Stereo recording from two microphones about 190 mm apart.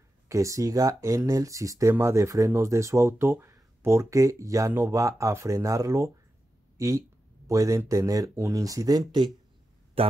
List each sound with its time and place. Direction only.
0.3 s speech: 15° right (ahead or behind)